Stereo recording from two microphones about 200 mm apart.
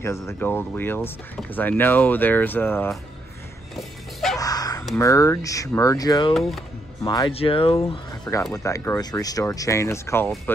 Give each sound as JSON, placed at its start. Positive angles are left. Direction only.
{"t": 0.0, "sound": "speech", "side_deg": 15}
{"t": 3.7, "sound": "dog", "side_deg": 0}
{"t": 4.4, "sound": "honk", "side_deg": 20}
{"t": 4.9, "sound": "speech", "side_deg": 15}
{"t": 8.1, "sound": "music", "side_deg": 15}
{"t": 8.6, "sound": "speech", "side_deg": 15}